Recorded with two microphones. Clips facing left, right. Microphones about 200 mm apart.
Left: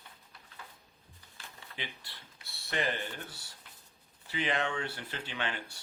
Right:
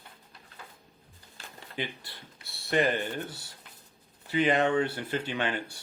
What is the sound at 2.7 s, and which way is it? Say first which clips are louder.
Speech: right 8 dB; 50° right (ahead or behind).